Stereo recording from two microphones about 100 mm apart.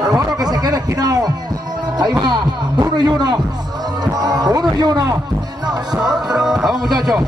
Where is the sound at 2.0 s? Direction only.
45° right (ahead or behind).